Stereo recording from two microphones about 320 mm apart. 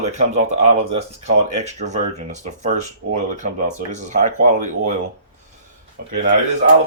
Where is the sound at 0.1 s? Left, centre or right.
Right.